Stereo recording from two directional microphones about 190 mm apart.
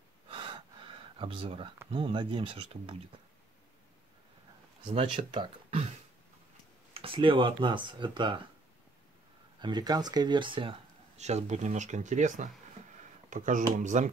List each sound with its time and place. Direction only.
0.3 s gasp: 25° right (ahead or behind)
1.9 s speech: 30° right (ahead or behind)
4.8 s speech: 25° right (ahead or behind)
6.9 s speech: 30° right (ahead or behind)
9.6 s speech: 20° right (ahead or behind); by 14.0 s 40° right (ahead or behind)